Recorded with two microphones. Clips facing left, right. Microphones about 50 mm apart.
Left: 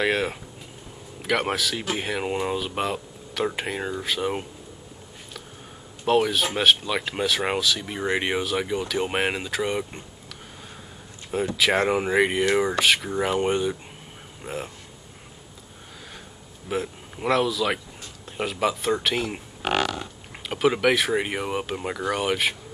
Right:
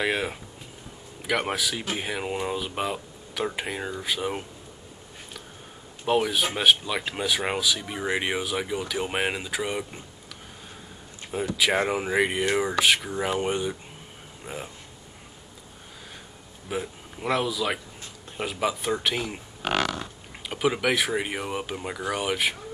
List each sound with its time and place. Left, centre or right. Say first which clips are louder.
0.0 s speech: left 3 dB; centre
6.0 s speech: left 2 dB; centre
11.5 s speech: left 2 dB; centre
16.6 s a man's voice: left 3 dB; centre
19.3 s a sound: left 2 dB; centre
20.4 s speech: left 4 dB; centre